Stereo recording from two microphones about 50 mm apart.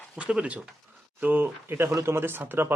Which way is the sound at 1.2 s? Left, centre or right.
Right.